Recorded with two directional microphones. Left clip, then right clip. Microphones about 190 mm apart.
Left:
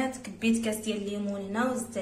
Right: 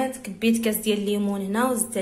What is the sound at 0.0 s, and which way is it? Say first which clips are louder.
A woman's voice: right 6 dB; 35° right (ahead or behind).